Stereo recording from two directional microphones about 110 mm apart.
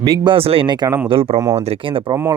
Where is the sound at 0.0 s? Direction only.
40° right (ahead or behind).